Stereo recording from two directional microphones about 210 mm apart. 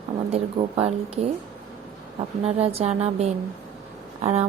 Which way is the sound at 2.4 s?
30° right (ahead or behind).